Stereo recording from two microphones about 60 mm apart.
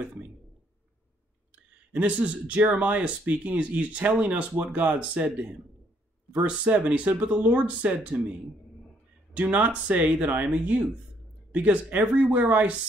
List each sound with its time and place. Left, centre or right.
1.5 s speech: right